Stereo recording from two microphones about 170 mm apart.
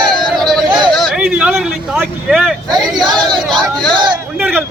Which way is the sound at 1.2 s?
10° right (ahead or behind).